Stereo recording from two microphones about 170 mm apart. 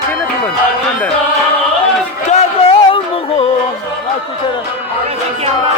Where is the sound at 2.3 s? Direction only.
35° left (ahead or behind).